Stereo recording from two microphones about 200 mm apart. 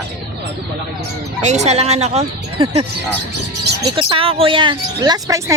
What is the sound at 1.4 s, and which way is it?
Speech, 35° right (ahead or behind).